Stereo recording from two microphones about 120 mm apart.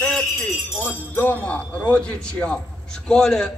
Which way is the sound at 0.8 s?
15° left (ahead or behind).